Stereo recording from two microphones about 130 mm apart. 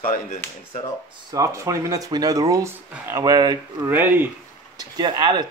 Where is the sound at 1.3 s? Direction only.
25° right (ahead or behind).